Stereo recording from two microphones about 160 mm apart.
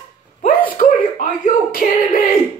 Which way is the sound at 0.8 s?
55° left (ahead or behind).